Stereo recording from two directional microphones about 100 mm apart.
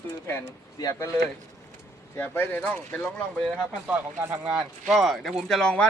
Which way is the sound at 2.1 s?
20° left (ahead or behind).